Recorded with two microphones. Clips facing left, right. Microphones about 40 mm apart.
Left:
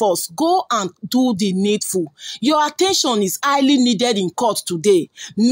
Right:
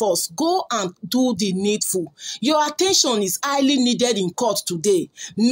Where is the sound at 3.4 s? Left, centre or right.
Left.